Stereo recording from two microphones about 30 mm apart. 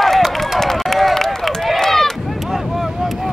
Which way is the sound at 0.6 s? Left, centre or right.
Centre.